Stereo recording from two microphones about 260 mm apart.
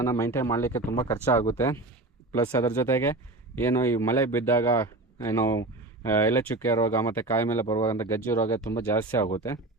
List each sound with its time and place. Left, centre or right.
0.0 s speech: centre